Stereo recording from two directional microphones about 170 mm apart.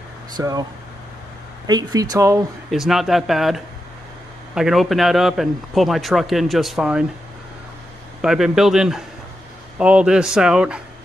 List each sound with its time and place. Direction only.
0.4 s speech: 20° right (ahead or behind)
1.7 s speech: 20° right (ahead or behind)
2.7 s a man's voice: centre (ahead or behind)
8.2 s a man's voice: 5° right (ahead or behind)